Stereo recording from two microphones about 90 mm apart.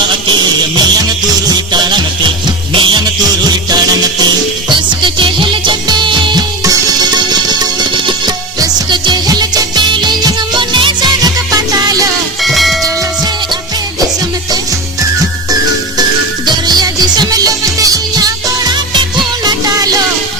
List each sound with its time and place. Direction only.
0.8 s music: 50° right (ahead or behind)
4.7 s music: 65° right (ahead or behind)
6.7 s music: 50° right (ahead or behind)
11.2 s music: 45° right (ahead or behind)
12.4 s music: centre (ahead or behind)
16.5 s music: 50° right (ahead or behind)